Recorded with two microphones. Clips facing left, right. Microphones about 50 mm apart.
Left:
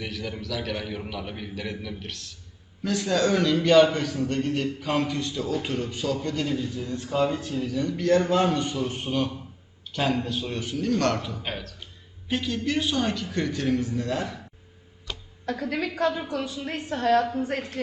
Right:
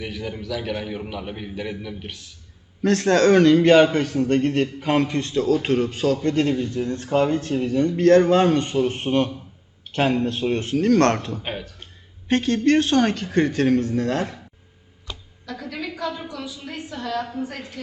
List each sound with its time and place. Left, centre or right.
0.0 s a man's voice: centre
2.8 s a man's voice: right
7.6 s a man's voice: right
12.3 s a man's voice: right
15.4 s a woman's voice: left